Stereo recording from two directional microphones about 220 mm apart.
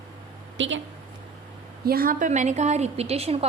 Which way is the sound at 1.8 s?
40° right (ahead or behind).